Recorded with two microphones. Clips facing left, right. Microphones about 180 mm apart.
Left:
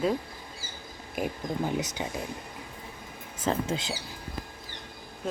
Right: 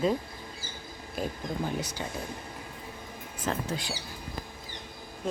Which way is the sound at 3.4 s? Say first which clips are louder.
Left 4 dB; 25° left (ahead or behind).